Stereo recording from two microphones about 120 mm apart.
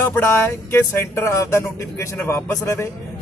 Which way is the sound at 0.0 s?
20° left (ahead or behind).